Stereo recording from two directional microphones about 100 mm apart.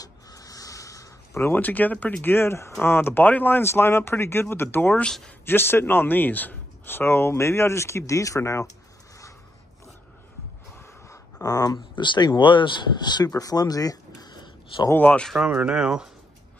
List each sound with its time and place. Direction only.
0.0 s a sound: 35° left (ahead or behind); by 2.1 s 15° left (ahead or behind)
2.2 s speech: 25° left (ahead or behind)
5.0 s speech: 5° left (ahead or behind)
5.4 s speech: 20° left (ahead or behind)
10.8 s gasp: 25° left (ahead or behind)
11.4 s speech: 40° left (ahead or behind)
11.9 s speech: 50° left (ahead or behind)
15.0 s speech: 15° left (ahead or behind)
15.2 s speech: 5° right (ahead or behind)